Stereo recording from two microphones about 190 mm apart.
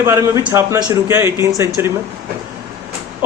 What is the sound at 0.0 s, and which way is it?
Speech, 15° right (ahead or behind).